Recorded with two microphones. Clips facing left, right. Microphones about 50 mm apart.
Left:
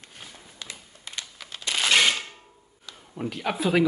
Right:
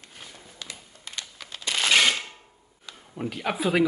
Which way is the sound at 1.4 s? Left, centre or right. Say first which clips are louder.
Even; centre.